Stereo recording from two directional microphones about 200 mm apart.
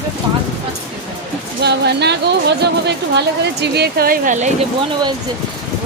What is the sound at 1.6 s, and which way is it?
Speech, 55° right (ahead or behind).